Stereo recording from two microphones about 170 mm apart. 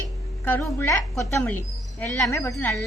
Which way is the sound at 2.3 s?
15° left (ahead or behind).